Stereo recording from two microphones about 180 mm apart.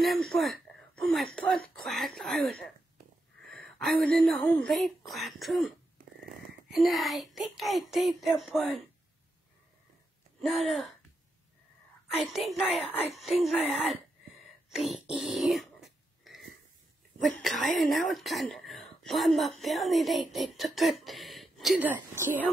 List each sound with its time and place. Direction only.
0.0 s speech: centre (ahead or behind)
6.7 s speech: centre (ahead or behind)
12.2 s speech: centre (ahead or behind)
13.6 s speech: 35° left (ahead or behind)
14.7 s speech: centre (ahead or behind)
17.2 s speech: centre (ahead or behind)